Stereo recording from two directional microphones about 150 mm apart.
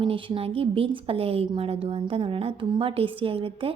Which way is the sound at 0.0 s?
35° right (ahead or behind).